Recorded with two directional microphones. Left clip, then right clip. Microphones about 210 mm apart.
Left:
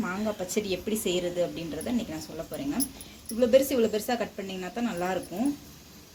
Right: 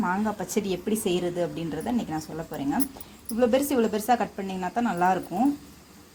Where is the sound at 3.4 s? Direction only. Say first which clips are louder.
Left 1 dB; 55° right (ahead or behind).